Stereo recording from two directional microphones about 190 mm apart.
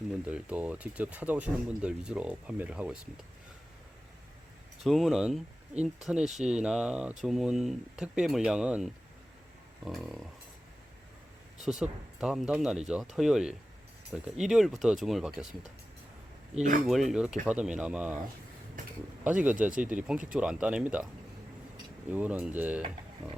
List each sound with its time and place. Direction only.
0.3 s speech: 5° right (ahead or behind)
4.8 s speech: centre (ahead or behind)
11.6 s speech: centre (ahead or behind)
16.6 s speech: 45° right (ahead or behind)
16.8 s speech: centre (ahead or behind)
19.2 s speech: 10° right (ahead or behind)
22.1 s speech: 10° right (ahead or behind)